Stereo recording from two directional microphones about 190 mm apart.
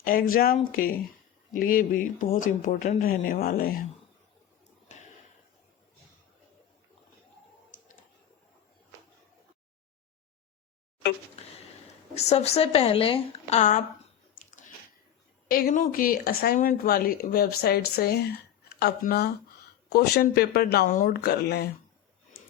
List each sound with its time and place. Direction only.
0.0 s speech: 50° left (ahead or behind)
12.1 s a woman's voice: 35° left (ahead or behind)
15.4 s speech: 50° left (ahead or behind)